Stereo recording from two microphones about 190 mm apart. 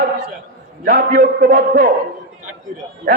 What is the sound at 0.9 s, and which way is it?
Speech, 45° right (ahead or behind).